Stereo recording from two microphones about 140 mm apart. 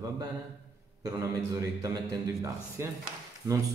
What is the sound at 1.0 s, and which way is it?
Speech, 20° right (ahead or behind).